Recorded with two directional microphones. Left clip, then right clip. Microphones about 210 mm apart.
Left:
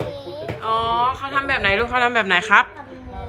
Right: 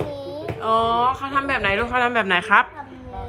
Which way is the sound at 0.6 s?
5° right (ahead or behind).